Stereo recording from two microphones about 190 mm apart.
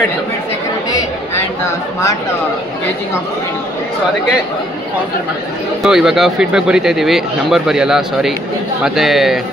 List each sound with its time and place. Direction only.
5.8 s speech: centre (ahead or behind)